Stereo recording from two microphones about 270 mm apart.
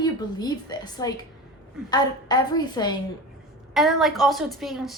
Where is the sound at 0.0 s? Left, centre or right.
Centre.